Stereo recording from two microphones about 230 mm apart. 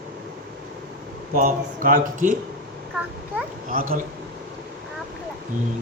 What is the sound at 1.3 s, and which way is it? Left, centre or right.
Speech, right.